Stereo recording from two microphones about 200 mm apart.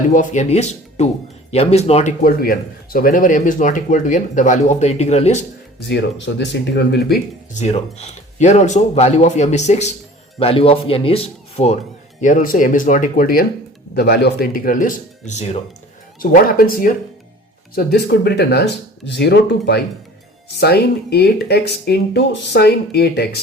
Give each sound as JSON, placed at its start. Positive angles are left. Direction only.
{"t": 0.1, "sound": "speech", "side_deg": 40}
{"t": 2.2, "sound": "speech", "side_deg": 45}
{"t": 5.8, "sound": "speech", "side_deg": 65}
{"t": 7.5, "sound": "speech", "side_deg": 35}
{"t": 12.2, "sound": "speech", "side_deg": 40}
{"t": 16.2, "sound": "speech", "side_deg": 45}